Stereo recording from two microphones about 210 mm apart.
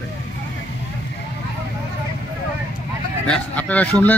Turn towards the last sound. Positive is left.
turn(degrees=5)  # may be behind; listen again after turning